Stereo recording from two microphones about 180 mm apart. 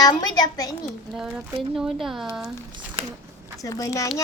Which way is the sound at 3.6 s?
20° left (ahead or behind).